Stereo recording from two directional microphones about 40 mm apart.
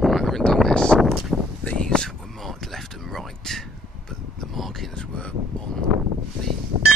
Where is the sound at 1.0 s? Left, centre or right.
Centre.